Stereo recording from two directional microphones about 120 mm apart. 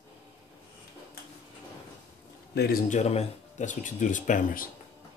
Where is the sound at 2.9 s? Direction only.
65° left (ahead or behind); by 4.4 s 90° left.